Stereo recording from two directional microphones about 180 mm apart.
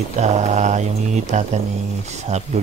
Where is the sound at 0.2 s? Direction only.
40° right (ahead or behind).